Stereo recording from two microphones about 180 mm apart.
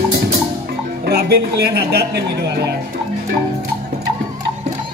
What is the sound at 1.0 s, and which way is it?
Speech, 65° right (ahead or behind).